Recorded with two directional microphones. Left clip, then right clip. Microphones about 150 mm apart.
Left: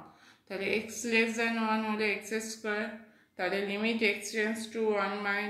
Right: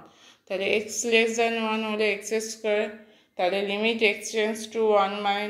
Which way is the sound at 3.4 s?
25° left (ahead or behind).